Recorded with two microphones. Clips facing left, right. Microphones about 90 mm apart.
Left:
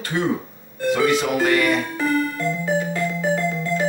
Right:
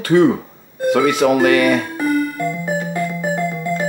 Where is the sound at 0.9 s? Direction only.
60° right (ahead or behind).